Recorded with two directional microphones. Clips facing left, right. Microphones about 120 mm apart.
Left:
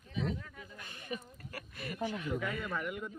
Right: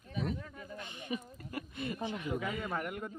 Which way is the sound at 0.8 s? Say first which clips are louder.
Right 2 dB; 20° right (ahead or behind).